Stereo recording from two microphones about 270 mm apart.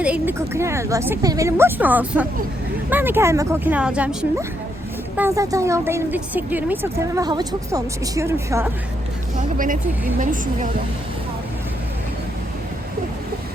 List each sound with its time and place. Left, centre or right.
0.0 s a woman's voice: centre
9.4 s a woman's voice: right